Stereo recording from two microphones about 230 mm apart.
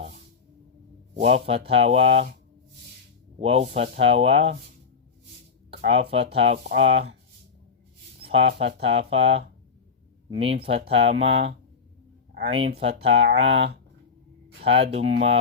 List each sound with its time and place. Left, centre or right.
1.1 s speech: right
3.4 s speech: right
5.9 s speech: right
8.3 s speech: right
8.8 s speech: right
10.5 s speech: right
14.6 s speech: right
15.0 s speech: right